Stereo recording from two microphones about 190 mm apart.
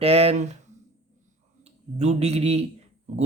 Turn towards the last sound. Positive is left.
turn(degrees=-35)  # may be behind; listen again after turning